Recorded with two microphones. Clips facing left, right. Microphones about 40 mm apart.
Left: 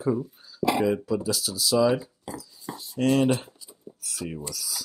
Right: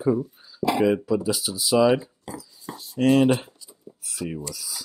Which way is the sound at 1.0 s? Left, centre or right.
Centre.